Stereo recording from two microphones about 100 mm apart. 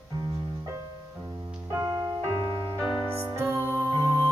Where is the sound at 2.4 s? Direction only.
50° right (ahead or behind).